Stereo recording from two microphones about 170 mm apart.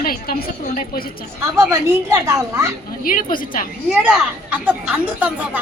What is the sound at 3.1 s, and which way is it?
Speech, 55° left (ahead or behind).